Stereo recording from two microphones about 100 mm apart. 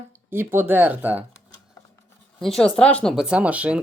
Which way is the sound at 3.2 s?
10° right (ahead or behind).